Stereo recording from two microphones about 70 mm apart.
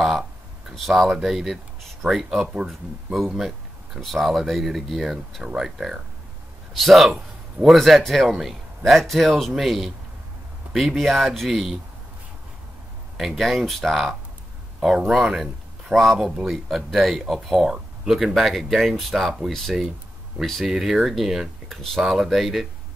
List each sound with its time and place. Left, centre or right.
0.7 s speech: centre
13.2 s speech: centre